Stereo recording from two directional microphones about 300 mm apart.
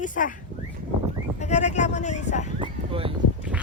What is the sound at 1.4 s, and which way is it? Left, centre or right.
A woman's voice, left.